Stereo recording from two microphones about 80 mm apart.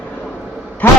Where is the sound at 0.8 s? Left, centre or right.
Centre.